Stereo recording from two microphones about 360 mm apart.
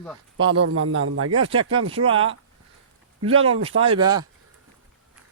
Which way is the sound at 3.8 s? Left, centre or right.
Centre.